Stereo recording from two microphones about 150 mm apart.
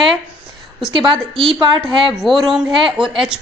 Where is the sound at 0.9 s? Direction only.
35° right (ahead or behind).